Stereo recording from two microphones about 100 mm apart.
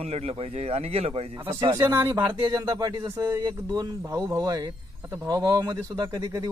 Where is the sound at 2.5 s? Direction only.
40° right (ahead or behind).